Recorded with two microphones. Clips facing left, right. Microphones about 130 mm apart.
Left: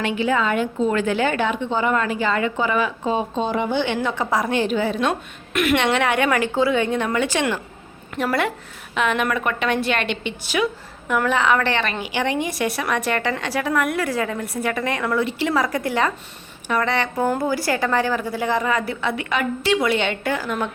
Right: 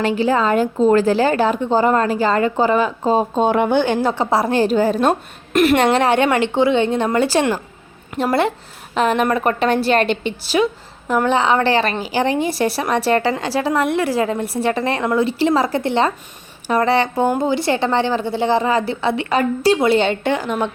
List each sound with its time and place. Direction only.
0.0 s a woman's voice: 35° right (ahead or behind)
3.4 s speech: 60° right (ahead or behind)
3.8 s a woman's voice: 35° right (ahead or behind)
17.2 s a woman's voice: 20° right (ahead or behind)